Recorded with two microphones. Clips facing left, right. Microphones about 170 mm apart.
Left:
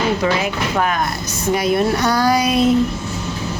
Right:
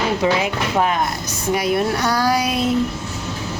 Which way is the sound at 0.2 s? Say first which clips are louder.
Even; 20° right (ahead or behind).